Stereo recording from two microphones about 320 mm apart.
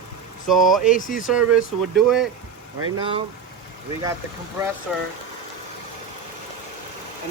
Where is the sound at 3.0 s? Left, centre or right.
Centre.